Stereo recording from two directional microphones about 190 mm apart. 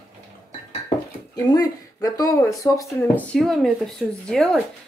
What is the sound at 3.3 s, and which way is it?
Speech, centre (ahead or behind).